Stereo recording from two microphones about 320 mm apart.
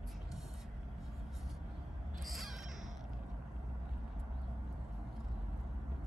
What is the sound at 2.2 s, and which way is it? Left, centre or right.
Crow, centre.